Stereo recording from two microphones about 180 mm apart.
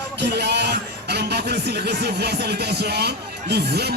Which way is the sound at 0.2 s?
70° right (ahead or behind).